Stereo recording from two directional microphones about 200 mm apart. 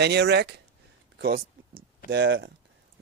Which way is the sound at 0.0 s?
55° right (ahead or behind).